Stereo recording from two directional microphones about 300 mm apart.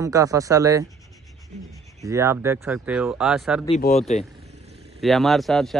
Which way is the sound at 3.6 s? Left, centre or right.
Left.